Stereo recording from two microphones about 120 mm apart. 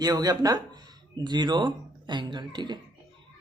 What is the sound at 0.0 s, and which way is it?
Speech, 35° right (ahead or behind).